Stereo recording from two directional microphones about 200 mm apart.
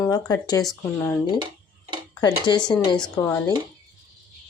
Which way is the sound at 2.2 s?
20° left (ahead or behind).